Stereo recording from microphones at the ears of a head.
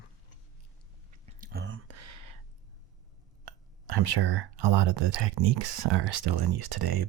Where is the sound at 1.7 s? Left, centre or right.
Right.